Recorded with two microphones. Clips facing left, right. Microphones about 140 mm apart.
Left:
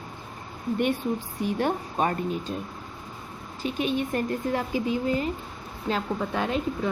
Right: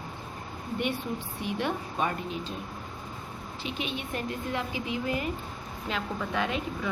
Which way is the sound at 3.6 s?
45° left (ahead or behind).